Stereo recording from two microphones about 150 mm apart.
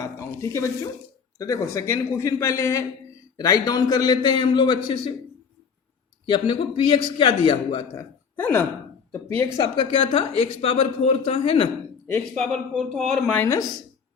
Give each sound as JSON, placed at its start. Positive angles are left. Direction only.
{"t": 0.0, "sound": "a sound", "side_deg": 20}
{"t": 1.4, "sound": "a man's voice", "side_deg": 20}
{"t": 6.2, "sound": "a woman's voice", "side_deg": 35}
{"t": 8.4, "sound": "speech", "side_deg": 10}
{"t": 9.6, "sound": "a woman's voice", "side_deg": 35}
{"t": 12.7, "sound": "a man's voice", "side_deg": 0}
{"t": 13.4, "sound": "speech", "side_deg": 20}